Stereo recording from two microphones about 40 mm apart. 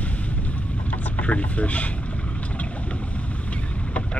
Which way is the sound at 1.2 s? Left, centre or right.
Left.